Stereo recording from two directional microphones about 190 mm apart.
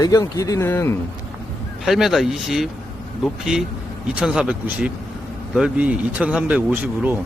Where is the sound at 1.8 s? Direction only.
Centre (ahead or behind).